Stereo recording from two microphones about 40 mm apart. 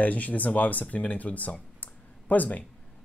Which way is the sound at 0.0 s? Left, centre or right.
Left.